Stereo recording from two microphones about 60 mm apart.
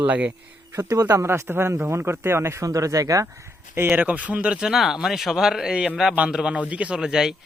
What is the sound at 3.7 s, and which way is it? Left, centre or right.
Speech, right.